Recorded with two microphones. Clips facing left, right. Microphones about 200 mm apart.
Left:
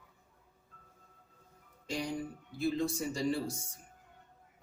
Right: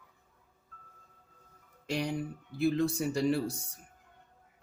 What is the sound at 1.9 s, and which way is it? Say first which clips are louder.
Speech: right 3 dB; 65° right (ahead or behind).